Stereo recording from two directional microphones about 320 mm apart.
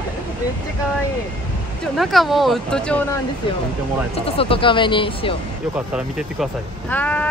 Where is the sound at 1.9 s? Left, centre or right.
Centre.